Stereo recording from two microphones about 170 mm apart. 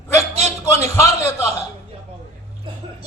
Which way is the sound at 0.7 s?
15° left (ahead or behind).